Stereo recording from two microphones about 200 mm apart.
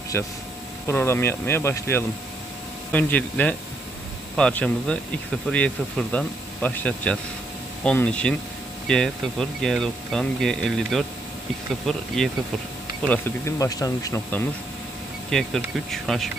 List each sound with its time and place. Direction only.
0.1 s speech: 10° left (ahead or behind)
13.1 s speech: 15° left (ahead or behind)
15.3 s speech: centre (ahead or behind)